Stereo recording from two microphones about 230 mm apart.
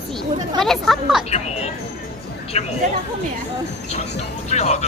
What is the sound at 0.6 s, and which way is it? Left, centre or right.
Speech, centre.